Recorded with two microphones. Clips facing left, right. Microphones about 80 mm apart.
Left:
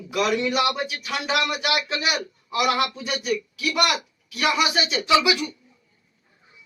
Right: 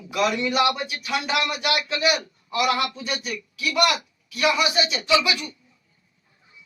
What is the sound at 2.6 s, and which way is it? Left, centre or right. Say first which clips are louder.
Speech: left 1 dB; left.